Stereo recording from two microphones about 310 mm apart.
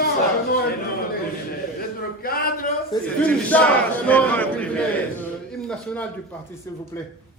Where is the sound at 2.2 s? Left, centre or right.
Left.